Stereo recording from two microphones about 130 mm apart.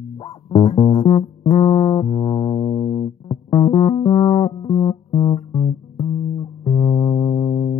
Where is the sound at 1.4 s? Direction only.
45° left (ahead or behind).